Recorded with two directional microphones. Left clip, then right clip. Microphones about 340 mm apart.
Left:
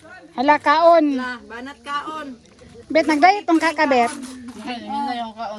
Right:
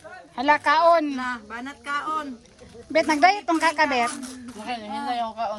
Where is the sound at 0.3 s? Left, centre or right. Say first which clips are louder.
Left 4 dB; centre.